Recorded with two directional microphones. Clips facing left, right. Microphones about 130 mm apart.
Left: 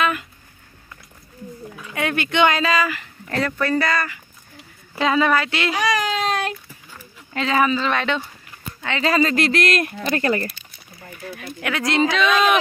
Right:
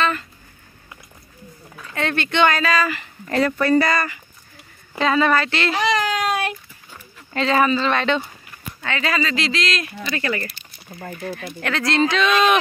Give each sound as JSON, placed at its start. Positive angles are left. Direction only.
{"t": 0.0, "sound": "a sound", "side_deg": 10}
{"t": 1.8, "sound": "speech", "side_deg": 10}
{"t": 2.9, "sound": "speech", "side_deg": -5}
{"t": 5.0, "sound": "speech", "side_deg": 10}
{"t": 6.2, "sound": "a sound", "side_deg": -10}
{"t": 7.3, "sound": "speech", "side_deg": 5}
{"t": 8.8, "sound": "speech", "side_deg": 25}
{"t": 9.1, "sound": "speech", "side_deg": 45}
{"t": 11.0, "sound": "speech", "side_deg": -70}
{"t": 11.6, "sound": "speech", "side_deg": 10}
{"t": 12.2, "sound": "speech", "side_deg": 5}